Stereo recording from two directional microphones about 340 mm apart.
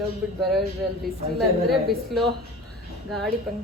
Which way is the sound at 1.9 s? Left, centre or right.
Centre.